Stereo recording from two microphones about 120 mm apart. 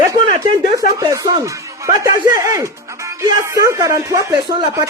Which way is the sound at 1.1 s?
30° right (ahead or behind).